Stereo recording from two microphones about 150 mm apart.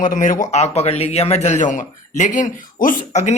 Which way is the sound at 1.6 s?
60° left (ahead or behind).